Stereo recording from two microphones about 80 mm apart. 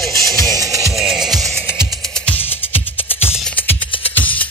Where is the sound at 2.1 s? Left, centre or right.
Centre.